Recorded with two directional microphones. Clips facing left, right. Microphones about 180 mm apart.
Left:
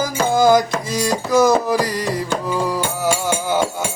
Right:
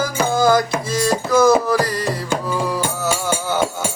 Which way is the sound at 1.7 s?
15° left (ahead or behind).